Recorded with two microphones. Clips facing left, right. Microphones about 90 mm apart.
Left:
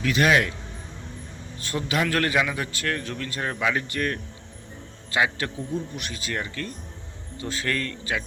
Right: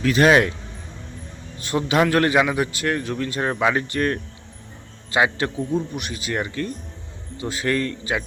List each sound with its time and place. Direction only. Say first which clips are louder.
0.0 s speech: right 5 dB; 40° right (ahead or behind)
1.5 s a man's voice: right 7 dB; 20° right (ahead or behind)
3.5 s speech: right 4 dB; 35° right (ahead or behind)
5.1 s a man's voice: right 4 dB; 25° right (ahead or behind)